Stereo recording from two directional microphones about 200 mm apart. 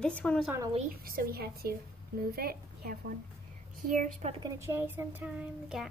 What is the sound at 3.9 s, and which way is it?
Speech, 35° right (ahead or behind).